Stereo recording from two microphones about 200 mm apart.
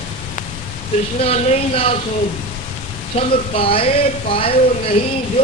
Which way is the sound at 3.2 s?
30° left (ahead or behind).